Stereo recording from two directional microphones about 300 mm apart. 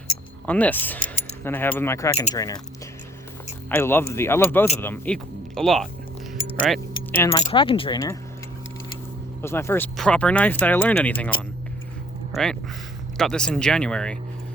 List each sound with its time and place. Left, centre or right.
0.4 s speech: centre
3.7 s speech: centre
6.7 s keys jangling: centre
7.3 s speech: centre
9.4 s speech: centre
12.3 s speech: centre